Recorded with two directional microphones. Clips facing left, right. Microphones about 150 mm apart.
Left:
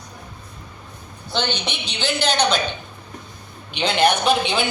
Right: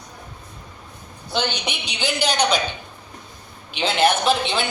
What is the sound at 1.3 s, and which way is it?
A woman's voice, 10° right (ahead or behind).